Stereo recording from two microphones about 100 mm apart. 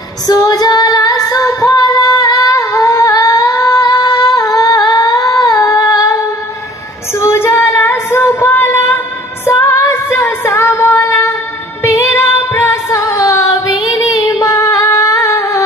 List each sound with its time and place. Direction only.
0.3 s female singing: 40° left (ahead or behind)
4.5 s humming: 40° left (ahead or behind)
5.7 s singing: 40° left (ahead or behind)
7.2 s female singing: 25° left (ahead or behind)
13.7 s female singing: centre (ahead or behind)
14.5 s singing: 35° left (ahead or behind)